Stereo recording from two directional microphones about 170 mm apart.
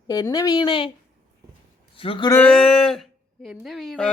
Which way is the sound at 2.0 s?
30° left (ahead or behind).